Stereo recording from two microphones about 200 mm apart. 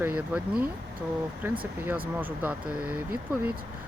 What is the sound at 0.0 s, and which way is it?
Speech, 10° right (ahead or behind).